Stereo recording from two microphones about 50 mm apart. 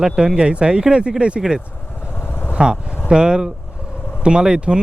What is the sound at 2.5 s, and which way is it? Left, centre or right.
Speech, centre.